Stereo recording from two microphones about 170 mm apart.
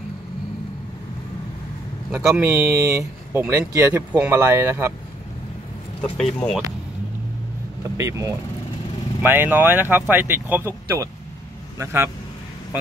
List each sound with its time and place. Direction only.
2.4 s speech: 15° right (ahead or behind)
6.1 s speech: centre (ahead or behind)
8.0 s speech: 15° right (ahead or behind)